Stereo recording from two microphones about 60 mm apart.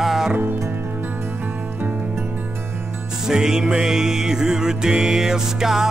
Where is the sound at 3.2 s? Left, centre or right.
Centre.